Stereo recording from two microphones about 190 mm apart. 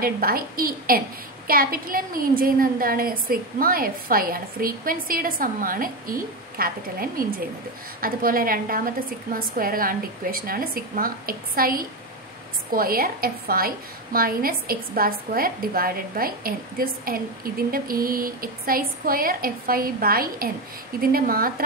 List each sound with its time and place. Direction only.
0.0 s a woman's voice: 50° right (ahead or behind)